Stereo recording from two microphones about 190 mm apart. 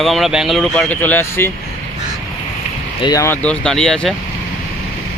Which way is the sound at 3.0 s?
15° left (ahead or behind).